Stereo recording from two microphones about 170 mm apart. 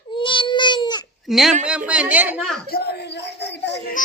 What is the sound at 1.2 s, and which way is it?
Speech, centre (ahead or behind).